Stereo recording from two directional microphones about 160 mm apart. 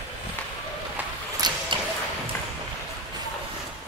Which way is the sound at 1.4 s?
25° right (ahead or behind).